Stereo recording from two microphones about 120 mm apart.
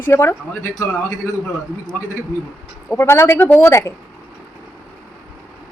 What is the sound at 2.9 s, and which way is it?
A woman's voice, 20° left (ahead or behind).